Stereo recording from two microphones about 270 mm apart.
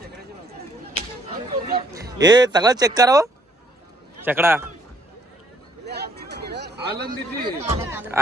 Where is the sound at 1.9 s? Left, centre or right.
Centre.